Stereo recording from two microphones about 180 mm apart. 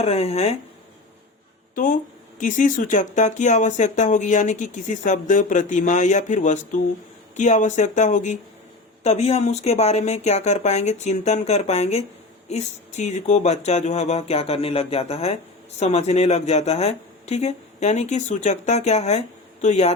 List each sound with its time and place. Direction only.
0.0 s speech: 35° left (ahead or behind)
1.7 s speech: 50° left (ahead or behind)